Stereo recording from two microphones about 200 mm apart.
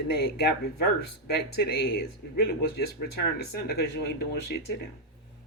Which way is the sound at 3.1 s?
55° left (ahead or behind).